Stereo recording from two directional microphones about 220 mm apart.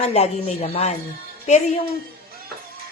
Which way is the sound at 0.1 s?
30° left (ahead or behind).